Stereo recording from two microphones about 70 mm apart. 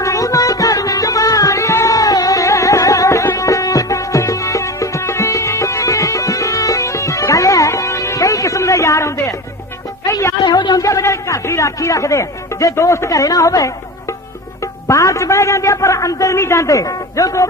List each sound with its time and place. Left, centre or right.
0.0 s music: left
10.4 s a sound: left
10.8 s a man's voice: left